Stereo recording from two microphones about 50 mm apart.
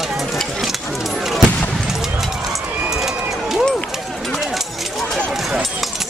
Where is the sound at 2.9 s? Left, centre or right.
Centre.